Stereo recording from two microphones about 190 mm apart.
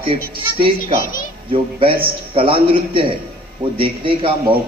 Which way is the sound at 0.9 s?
45° left (ahead or behind).